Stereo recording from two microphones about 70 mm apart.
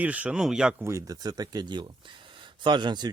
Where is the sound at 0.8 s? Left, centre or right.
Right.